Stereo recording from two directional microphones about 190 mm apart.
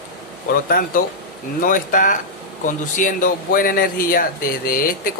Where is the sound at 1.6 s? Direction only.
45° left (ahead or behind).